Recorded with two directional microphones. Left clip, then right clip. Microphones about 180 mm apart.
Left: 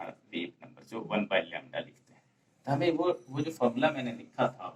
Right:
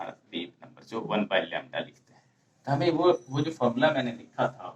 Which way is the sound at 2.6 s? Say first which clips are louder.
Right 5 dB; 15° right (ahead or behind).